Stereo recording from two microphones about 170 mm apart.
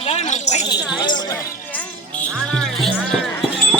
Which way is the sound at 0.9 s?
25° left (ahead or behind).